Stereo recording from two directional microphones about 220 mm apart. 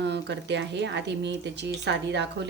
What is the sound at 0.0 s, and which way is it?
A woman's voice, 50° right (ahead or behind).